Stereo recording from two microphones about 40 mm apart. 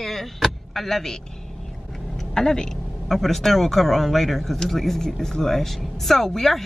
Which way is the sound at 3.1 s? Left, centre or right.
Centre.